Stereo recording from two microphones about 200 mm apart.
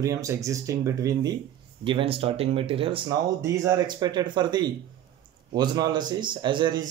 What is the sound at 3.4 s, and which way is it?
Speech, 15° right (ahead or behind).